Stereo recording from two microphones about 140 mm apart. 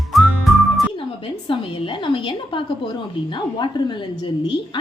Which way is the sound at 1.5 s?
35° left (ahead or behind).